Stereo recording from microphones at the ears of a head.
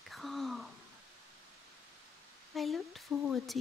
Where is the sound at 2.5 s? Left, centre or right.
Left.